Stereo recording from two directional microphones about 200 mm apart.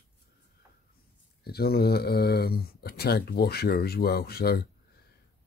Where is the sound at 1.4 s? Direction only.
50° left (ahead or behind).